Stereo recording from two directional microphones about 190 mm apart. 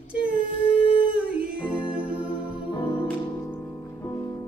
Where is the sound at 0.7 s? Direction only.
30° left (ahead or behind).